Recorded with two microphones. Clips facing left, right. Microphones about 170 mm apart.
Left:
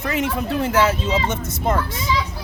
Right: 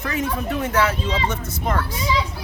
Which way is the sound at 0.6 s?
30° left (ahead or behind).